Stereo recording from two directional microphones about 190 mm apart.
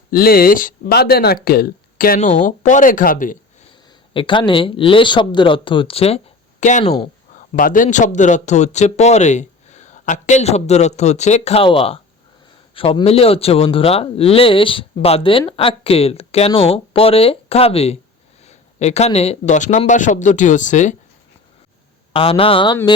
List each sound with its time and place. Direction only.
0.1 s speech: 50° left (ahead or behind)
4.1 s a man's voice: 25° left (ahead or behind)
22.1 s speech: 30° left (ahead or behind)